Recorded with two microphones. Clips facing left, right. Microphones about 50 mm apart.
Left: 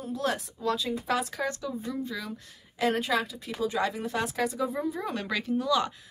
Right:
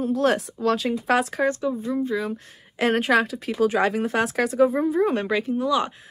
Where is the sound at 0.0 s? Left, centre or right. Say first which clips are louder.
Right 9 dB; right.